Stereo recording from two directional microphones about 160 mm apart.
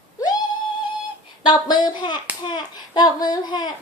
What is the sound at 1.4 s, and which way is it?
Speech, 30° left (ahead or behind).